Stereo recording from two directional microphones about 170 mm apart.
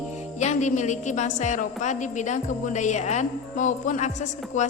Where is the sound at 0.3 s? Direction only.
45° left (ahead or behind).